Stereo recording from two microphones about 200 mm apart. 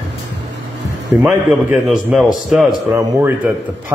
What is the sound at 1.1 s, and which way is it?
A man's voice, 5° right (ahead or behind).